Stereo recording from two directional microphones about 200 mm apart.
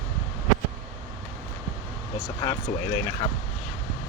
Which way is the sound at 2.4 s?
20° left (ahead or behind).